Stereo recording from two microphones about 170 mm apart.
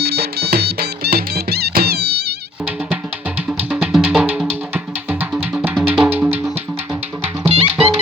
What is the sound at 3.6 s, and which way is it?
Music, 5° right (ahead or behind).